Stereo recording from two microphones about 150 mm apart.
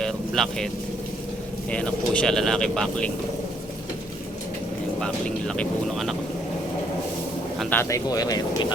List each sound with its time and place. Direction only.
0.0 s vehicle: 5° left (ahead or behind)
1.7 s speech: 5° left (ahead or behind)
4.9 s speech: 5° left (ahead or behind)
7.6 s speech: 10° left (ahead or behind)
7.9 s speech: 20° left (ahead or behind)